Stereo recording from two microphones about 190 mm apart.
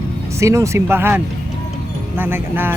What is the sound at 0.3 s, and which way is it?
Speech, 15° right (ahead or behind).